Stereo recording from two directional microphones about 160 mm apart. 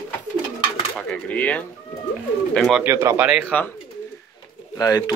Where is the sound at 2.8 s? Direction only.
15° right (ahead or behind).